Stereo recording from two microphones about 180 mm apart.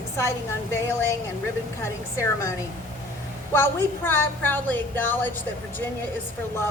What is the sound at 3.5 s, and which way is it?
Speech, 10° left (ahead or behind).